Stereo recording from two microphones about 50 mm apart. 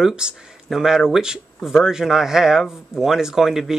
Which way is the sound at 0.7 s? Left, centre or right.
Centre.